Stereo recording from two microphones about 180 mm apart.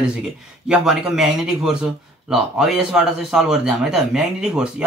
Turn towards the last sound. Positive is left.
turn(degrees=-5)  # may be behind; listen again after turning